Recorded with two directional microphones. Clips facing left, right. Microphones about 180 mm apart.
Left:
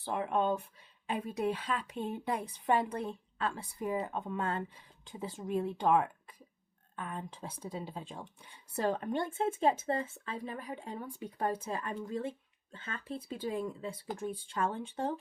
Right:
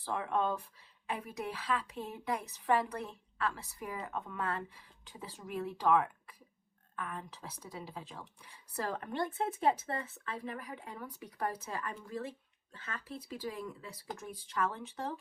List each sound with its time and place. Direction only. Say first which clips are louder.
0.0 s a woman's voice: left 2 dB; 20° left (ahead or behind)